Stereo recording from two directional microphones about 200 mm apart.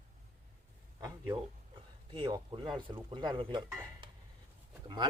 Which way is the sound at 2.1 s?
25° right (ahead or behind).